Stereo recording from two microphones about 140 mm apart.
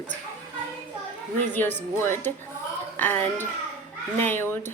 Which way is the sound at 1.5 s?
15° left (ahead or behind).